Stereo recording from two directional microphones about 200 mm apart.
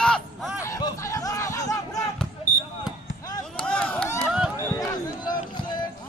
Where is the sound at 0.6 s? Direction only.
15° left (ahead or behind).